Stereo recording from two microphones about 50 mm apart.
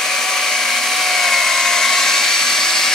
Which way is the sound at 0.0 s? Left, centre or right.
Centre.